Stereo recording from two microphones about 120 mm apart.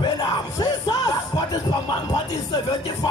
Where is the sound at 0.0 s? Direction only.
35° left (ahead or behind).